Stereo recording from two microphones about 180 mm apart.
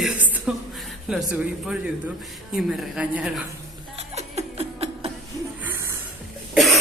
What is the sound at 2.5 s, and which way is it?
Speech, 5° right (ahead or behind).